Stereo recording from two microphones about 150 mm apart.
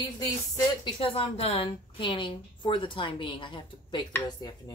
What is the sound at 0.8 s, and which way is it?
Speech, 35° left (ahead or behind).